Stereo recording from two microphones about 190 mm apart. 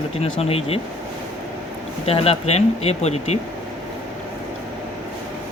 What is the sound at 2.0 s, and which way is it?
Speech, 30° left (ahead or behind).